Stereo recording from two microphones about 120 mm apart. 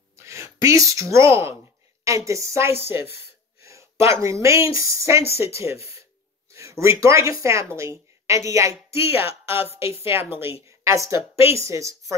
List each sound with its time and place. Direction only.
0.2 s a woman's voice: 25° right (ahead or behind)
3.6 s a sound: 25° right (ahead or behind)
4.1 s a woman's voice: 25° right (ahead or behind)
9.9 s a woman's voice: 20° right (ahead or behind)